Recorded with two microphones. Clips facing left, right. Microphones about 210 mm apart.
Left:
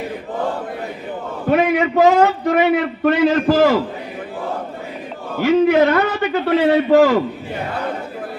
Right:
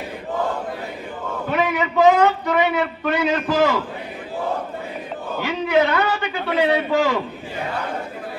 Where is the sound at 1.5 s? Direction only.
50° left (ahead or behind).